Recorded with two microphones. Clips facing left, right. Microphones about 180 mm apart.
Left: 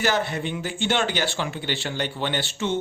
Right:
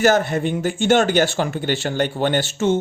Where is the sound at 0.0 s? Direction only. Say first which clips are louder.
Right 7 dB; 45° right (ahead or behind).